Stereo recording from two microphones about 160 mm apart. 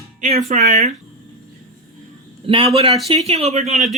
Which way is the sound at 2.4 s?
35° right (ahead or behind).